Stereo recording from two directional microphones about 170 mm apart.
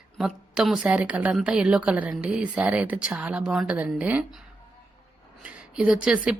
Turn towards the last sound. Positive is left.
turn(degrees=-5)  # may be behind; listen again after turning